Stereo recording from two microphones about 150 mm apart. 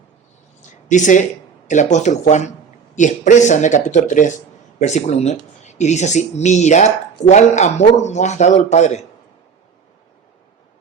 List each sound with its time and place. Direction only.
0.9 s speech: 55° left (ahead or behind)